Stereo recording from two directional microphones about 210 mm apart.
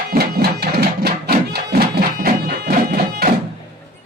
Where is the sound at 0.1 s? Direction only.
50° right (ahead or behind).